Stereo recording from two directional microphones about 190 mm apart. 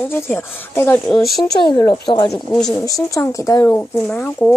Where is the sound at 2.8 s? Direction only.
15° left (ahead or behind).